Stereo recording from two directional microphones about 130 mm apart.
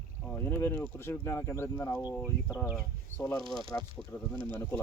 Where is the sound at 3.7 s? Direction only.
20° left (ahead or behind).